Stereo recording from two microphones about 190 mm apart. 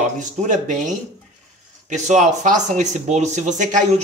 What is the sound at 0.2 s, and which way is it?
Speech, 40° right (ahead or behind).